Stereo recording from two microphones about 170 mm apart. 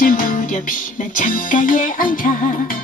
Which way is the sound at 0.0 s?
50° left (ahead or behind).